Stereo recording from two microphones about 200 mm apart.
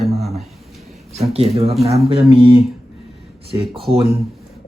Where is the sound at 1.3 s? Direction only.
30° right (ahead or behind).